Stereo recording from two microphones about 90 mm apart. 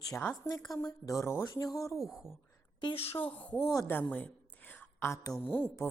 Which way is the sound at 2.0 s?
5° right (ahead or behind).